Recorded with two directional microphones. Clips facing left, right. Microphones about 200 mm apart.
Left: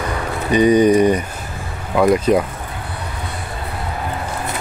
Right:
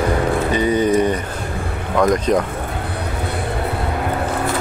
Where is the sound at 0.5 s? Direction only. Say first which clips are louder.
Left 6 dB; 15° left (ahead or behind).